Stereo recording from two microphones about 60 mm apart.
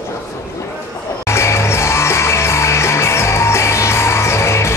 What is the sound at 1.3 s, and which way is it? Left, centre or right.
Music, left.